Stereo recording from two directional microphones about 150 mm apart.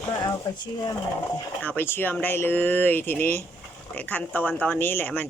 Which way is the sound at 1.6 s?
15° left (ahead or behind).